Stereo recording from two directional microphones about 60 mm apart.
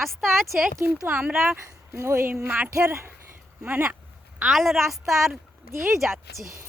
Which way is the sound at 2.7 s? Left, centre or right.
Right.